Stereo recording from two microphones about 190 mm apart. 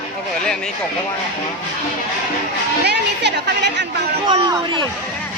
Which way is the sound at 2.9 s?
65° right (ahead or behind).